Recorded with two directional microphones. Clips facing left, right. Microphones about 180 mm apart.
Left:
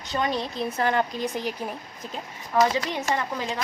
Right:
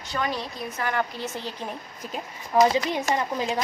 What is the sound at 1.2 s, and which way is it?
Speech, 15° left (ahead or behind).